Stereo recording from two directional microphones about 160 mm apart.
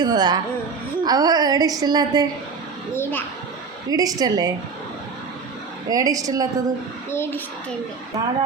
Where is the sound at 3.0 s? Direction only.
10° left (ahead or behind).